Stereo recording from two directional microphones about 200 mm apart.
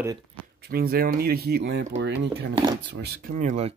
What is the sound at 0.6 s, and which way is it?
Speech, 50° right (ahead or behind).